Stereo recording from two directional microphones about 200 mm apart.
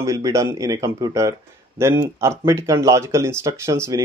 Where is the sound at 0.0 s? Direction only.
15° right (ahead or behind).